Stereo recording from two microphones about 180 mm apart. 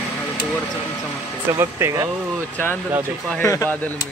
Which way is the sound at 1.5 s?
15° right (ahead or behind).